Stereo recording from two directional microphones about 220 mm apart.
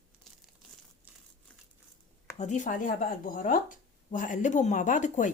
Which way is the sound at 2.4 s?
35° left (ahead or behind).